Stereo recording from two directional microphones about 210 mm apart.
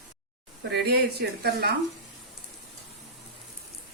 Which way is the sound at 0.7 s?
50° right (ahead or behind).